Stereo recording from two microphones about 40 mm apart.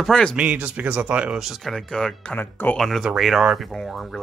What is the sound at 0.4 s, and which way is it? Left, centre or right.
Speech, right.